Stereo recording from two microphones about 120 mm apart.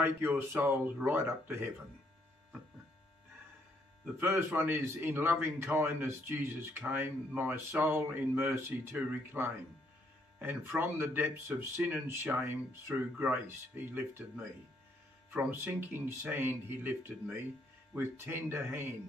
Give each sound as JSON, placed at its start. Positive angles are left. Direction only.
{"t": 0.0, "sound": "speech", "side_deg": -20}
{"t": 4.0, "sound": "speech", "side_deg": -20}